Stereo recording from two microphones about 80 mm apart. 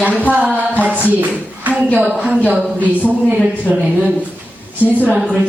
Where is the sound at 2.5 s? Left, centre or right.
Centre.